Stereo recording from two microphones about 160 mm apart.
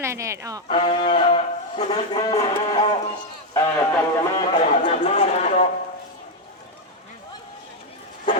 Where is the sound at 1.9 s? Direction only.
20° left (ahead or behind).